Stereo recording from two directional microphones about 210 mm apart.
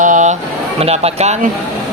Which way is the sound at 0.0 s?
35° right (ahead or behind).